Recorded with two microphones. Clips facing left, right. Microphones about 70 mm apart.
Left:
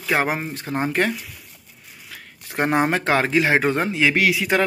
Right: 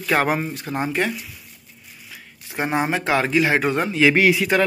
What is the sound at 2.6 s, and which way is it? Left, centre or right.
Speech, left.